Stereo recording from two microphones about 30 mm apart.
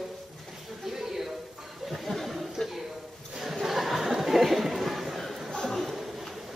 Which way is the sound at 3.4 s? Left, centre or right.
Centre.